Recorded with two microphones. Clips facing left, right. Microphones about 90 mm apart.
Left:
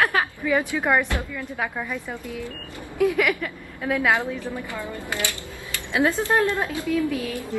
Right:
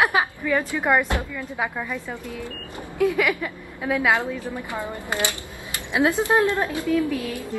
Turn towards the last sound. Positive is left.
turn(degrees=-15)  # may be behind; listen again after turning